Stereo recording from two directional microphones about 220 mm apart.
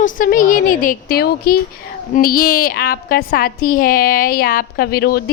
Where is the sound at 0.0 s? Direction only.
40° left (ahead or behind).